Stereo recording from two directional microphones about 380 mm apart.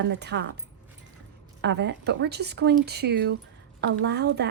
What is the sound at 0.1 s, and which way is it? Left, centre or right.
Speech, right.